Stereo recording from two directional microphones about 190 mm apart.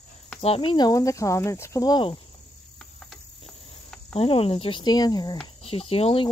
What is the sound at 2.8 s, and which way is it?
Cricket, centre (ahead or behind).